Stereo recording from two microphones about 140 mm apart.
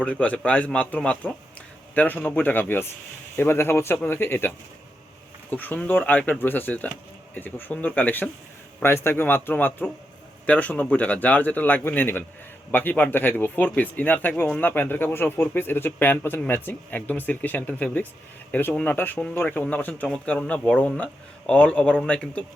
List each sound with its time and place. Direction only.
0.0 s speech: 10° left (ahead or behind)